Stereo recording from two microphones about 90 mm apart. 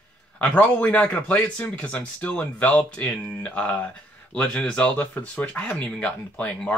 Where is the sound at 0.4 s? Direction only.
15° left (ahead or behind).